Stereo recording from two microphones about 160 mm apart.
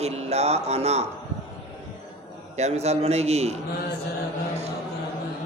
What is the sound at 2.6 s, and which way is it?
Speech, 45° right (ahead or behind).